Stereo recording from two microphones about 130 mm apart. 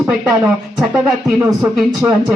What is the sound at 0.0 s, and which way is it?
Speech, centre (ahead or behind).